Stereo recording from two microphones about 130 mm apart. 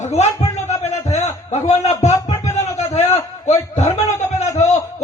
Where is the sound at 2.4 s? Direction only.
60° left (ahead or behind).